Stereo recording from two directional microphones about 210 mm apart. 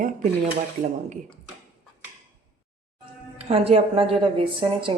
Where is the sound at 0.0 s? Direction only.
40° right (ahead or behind).